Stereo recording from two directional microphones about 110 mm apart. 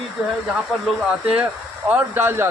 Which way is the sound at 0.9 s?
10° right (ahead or behind).